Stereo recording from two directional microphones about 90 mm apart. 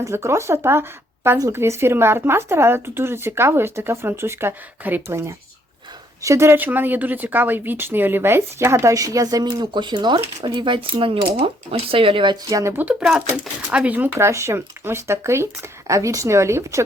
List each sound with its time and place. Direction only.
0.0 s speech: 30° right (ahead or behind); by 12.4 s 65° right (ahead or behind)
12.5 s a woman's voice: 40° right (ahead or behind)
12.7 s speech: 15° right (ahead or behind)
14.2 s a woman's voice: 30° right (ahead or behind)